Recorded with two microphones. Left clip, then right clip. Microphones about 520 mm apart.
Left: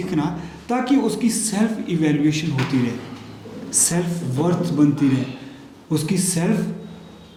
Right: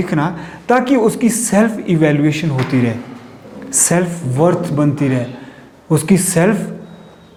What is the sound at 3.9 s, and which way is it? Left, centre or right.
Speech, right.